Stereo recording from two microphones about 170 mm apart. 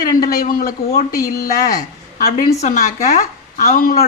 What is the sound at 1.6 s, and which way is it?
A woman's voice, 60° left (ahead or behind).